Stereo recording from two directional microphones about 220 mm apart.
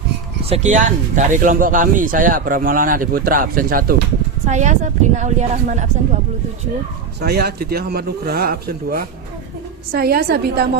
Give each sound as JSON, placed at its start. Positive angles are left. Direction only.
{"t": 0.4, "sound": "speech", "side_deg": -30}
{"t": 7.2, "sound": "speech", "side_deg": -45}